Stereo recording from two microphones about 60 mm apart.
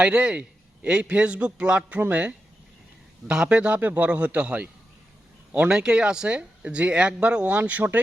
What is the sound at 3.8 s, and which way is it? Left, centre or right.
Speech, right.